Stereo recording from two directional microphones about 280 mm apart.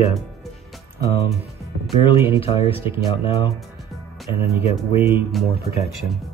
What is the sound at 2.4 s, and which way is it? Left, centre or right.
Speech, centre.